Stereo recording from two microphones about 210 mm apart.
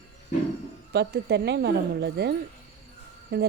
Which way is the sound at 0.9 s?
55° right (ahead or behind).